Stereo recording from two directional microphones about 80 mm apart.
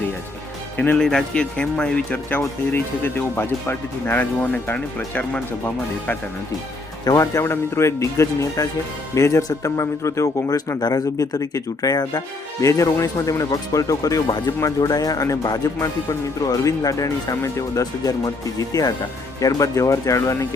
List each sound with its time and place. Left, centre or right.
0.9 s speech: centre
7.0 s speech: left
7.3 s speech: left
10.8 s speech: left
12.6 s speech: left